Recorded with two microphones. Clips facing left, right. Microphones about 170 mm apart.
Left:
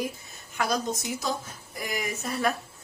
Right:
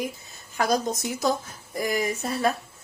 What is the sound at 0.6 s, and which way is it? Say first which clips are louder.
Speech: right 4 dB; 40° right (ahead or behind).